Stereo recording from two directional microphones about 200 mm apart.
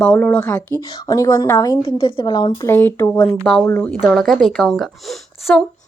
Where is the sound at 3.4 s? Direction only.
Centre (ahead or behind).